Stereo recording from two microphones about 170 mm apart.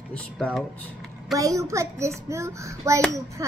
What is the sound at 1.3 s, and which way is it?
A child's voice, 20° right (ahead or behind).